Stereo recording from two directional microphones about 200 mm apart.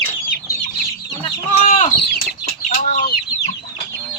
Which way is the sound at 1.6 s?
40° left (ahead or behind).